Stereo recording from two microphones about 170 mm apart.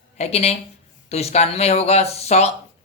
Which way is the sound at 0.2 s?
40° left (ahead or behind).